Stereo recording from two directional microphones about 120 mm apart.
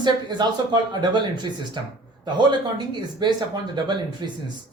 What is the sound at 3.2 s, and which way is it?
A woman's voice, 40° right (ahead or behind).